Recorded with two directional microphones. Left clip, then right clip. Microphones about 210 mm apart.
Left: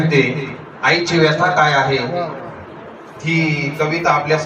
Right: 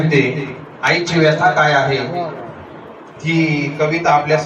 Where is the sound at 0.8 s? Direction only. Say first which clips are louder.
Left 1 dB; 20° right (ahead or behind).